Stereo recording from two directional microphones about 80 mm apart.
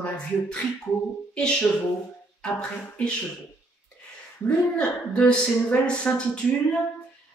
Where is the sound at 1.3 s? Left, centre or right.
Centre.